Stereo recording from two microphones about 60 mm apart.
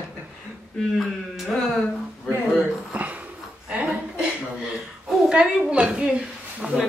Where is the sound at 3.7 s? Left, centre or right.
Right.